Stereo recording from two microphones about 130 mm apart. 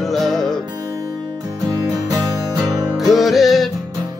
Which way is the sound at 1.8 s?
30° right (ahead or behind).